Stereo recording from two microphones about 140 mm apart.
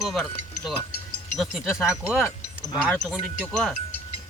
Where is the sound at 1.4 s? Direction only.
5° right (ahead or behind).